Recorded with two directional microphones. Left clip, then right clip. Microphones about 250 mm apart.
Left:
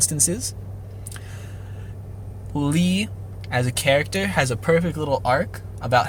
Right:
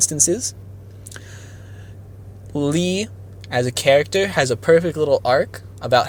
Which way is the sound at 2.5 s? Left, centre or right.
Centre.